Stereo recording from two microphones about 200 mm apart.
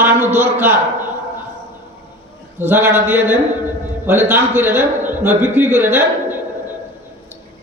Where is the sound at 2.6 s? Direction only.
10° right (ahead or behind).